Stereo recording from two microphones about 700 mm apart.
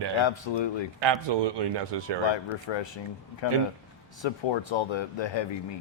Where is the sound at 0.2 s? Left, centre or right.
Left.